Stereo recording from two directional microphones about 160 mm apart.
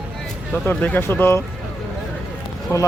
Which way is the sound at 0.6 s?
10° left (ahead or behind).